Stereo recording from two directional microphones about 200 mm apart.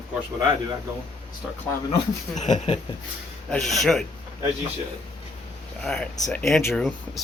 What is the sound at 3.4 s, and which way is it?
Speech, centre (ahead or behind).